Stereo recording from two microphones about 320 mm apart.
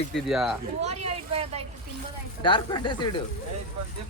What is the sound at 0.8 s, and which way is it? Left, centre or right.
Speech, centre.